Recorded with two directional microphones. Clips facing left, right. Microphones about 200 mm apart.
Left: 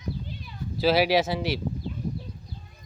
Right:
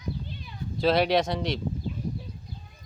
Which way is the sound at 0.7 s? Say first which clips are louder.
Left 1 dB; 5° left (ahead or behind).